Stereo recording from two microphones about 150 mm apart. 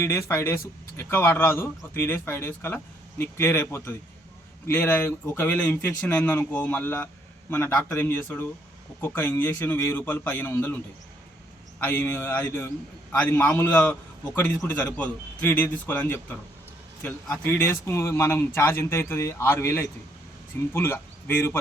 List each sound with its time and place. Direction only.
0.0 s speech: 20° left (ahead or behind)
11.8 s speech: 15° left (ahead or behind)